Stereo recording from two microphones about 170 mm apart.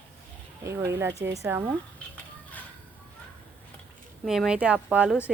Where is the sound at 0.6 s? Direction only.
15° right (ahead or behind).